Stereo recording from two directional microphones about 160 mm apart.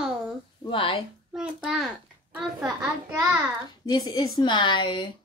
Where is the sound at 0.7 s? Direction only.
30° left (ahead or behind).